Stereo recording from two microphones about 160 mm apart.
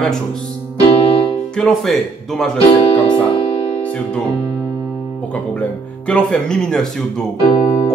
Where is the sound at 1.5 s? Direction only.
5° left (ahead or behind).